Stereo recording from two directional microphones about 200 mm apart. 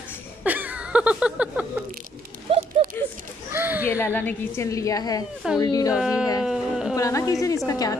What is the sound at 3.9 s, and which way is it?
A woman's voice, 10° left (ahead or behind).